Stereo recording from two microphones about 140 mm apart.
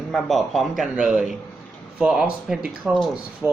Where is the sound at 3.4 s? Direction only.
10° right (ahead or behind).